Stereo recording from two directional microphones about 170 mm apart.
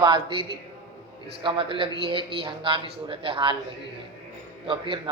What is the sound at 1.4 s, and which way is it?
Speech, 30° right (ahead or behind).